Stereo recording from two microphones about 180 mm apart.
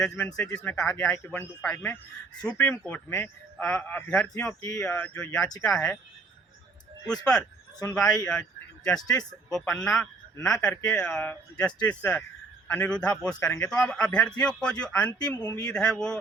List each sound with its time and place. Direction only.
0.0 s a man's voice: 5° left (ahead or behind)
7.9 s a man's voice: 5° left (ahead or behind)
15.4 s speech: 20° left (ahead or behind)
15.6 s speech: 5° left (ahead or behind)